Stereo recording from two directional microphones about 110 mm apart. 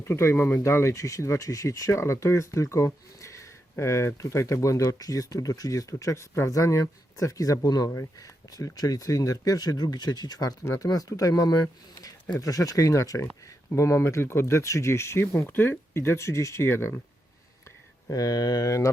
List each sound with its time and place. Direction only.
0.0 s speech: 25° left (ahead or behind)
18.1 s speech: 35° left (ahead or behind)